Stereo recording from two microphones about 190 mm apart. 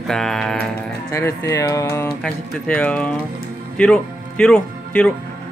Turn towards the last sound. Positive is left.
turn(degrees=5)  # may be behind; listen again after turning